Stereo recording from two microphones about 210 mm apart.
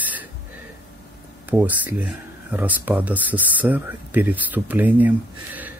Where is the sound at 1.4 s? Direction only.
10° right (ahead or behind).